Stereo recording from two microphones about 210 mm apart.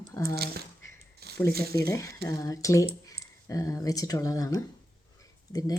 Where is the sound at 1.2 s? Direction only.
50° right (ahead or behind).